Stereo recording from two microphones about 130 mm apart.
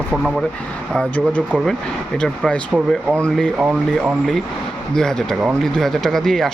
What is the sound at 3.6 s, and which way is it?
Speech, 10° right (ahead or behind).